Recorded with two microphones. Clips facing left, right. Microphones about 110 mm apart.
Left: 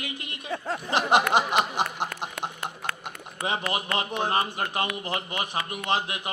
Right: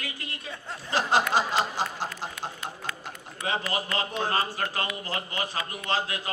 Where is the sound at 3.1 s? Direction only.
20° left (ahead or behind).